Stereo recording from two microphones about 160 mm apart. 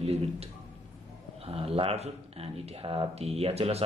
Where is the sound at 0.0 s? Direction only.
40° right (ahead or behind).